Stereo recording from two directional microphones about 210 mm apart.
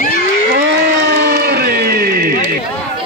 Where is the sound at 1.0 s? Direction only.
50° right (ahead or behind).